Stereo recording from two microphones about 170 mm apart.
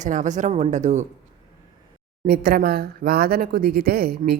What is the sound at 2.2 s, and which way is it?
Speech, 60° right (ahead or behind).